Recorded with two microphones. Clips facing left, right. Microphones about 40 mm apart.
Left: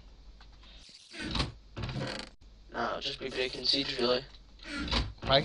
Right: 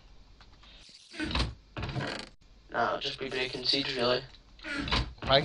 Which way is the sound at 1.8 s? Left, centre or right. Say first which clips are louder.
Right 2 dB; right.